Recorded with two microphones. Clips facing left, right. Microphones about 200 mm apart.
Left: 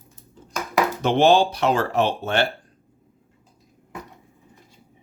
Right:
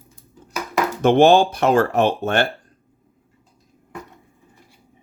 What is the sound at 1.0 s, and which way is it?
Speech, 50° right (ahead or behind).